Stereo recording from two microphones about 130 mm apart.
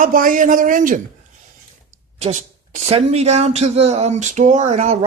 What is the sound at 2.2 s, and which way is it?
A man's voice, 65° right (ahead or behind).